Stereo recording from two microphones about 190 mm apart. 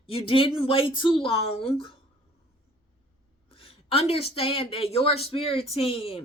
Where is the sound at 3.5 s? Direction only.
30° left (ahead or behind).